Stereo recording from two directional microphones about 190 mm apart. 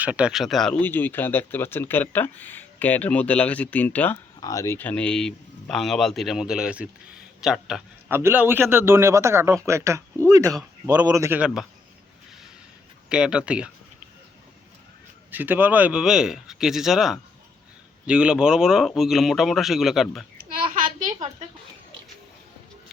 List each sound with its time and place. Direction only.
0.0 s a man's voice: 5° right (ahead or behind)
13.1 s speech: 5° right (ahead or behind)
15.3 s speech: 10° right (ahead or behind)
20.4 s a sound: 50° right (ahead or behind)